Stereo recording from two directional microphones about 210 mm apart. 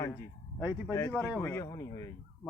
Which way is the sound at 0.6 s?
10° right (ahead or behind).